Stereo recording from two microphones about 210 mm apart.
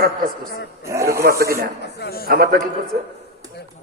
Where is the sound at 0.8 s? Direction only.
15° right (ahead or behind).